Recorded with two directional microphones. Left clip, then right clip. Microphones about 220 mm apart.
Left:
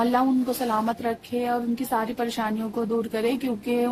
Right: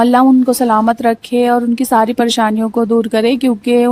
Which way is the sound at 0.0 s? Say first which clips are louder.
Right 13 dB; 40° right (ahead or behind).